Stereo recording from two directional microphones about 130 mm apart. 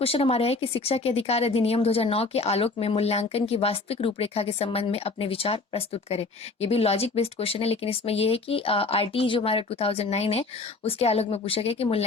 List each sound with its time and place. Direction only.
0.0 s speech: 50° left (ahead or behind)